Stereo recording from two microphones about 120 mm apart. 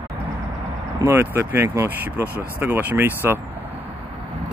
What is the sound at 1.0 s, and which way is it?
Speech, 20° right (ahead or behind).